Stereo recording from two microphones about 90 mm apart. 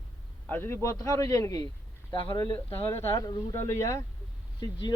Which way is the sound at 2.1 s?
65° left (ahead or behind).